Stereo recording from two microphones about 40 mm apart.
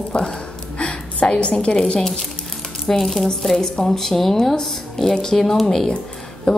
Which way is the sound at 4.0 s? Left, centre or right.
Centre.